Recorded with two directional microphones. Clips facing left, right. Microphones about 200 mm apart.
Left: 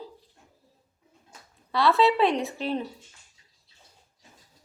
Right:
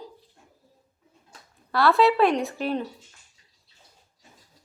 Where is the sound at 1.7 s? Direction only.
Centre (ahead or behind).